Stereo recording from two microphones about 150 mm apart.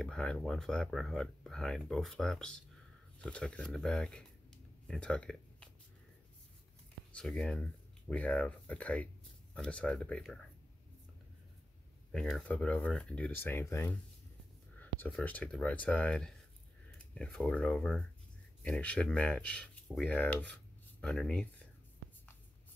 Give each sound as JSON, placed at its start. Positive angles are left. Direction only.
{"t": 0.0, "sound": "speech", "side_deg": 5}
{"t": 7.2, "sound": "speech", "side_deg": 5}
{"t": 12.1, "sound": "speech", "side_deg": 0}